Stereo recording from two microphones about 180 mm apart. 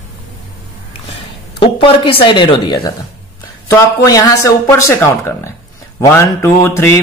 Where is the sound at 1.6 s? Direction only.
30° left (ahead or behind).